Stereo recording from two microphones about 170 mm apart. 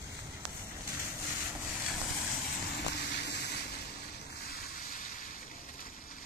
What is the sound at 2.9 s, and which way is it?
Vehicle, 75° left (ahead or behind).